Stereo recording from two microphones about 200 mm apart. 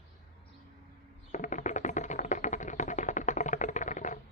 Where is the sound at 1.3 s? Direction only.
40° left (ahead or behind).